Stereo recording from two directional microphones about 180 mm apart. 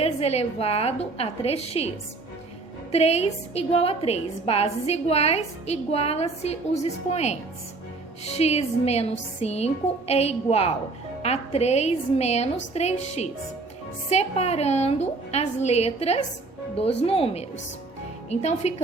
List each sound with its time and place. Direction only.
0.0 s a woman's voice: 35° left (ahead or behind)
2.9 s a woman's voice: 35° left (ahead or behind)